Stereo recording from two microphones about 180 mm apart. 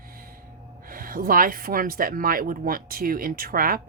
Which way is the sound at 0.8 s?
50° right (ahead or behind).